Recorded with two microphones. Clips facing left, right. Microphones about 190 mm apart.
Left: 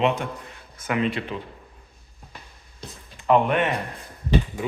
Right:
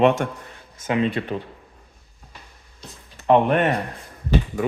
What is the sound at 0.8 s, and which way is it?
Speech, 25° right (ahead or behind).